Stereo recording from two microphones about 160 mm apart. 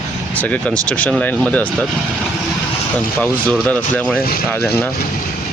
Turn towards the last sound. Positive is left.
turn(degrees=10)  # may be behind; listen again after turning